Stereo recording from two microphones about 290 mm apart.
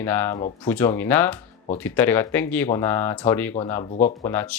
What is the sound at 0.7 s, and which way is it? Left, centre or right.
Speech, centre.